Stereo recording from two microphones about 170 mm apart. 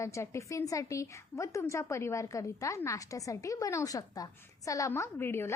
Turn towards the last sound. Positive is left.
turn(degrees=15)  # may be behind; listen again after turning